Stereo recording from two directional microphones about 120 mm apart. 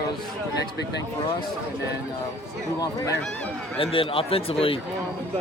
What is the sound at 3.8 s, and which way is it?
Speech, 50° left (ahead or behind).